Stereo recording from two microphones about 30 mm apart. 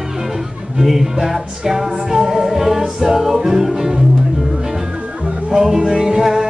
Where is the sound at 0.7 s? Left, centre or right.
Centre.